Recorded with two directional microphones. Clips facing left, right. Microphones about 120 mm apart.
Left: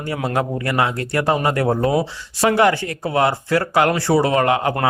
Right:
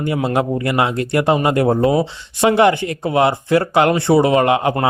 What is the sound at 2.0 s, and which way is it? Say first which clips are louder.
Speech: right 3 dB; 20° right (ahead or behind).